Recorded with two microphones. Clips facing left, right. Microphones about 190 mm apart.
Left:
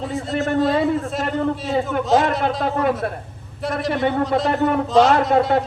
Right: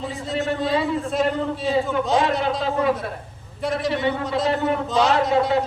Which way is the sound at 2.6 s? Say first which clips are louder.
Left 2 dB; 55° left (ahead or behind).